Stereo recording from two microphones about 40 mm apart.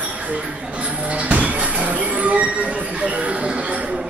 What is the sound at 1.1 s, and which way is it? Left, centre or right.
Music, right.